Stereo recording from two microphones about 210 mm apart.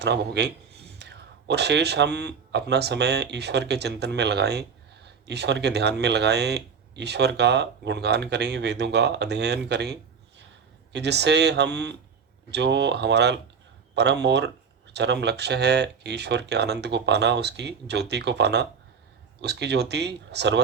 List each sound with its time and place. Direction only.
0.0 s speech: 55° right (ahead or behind)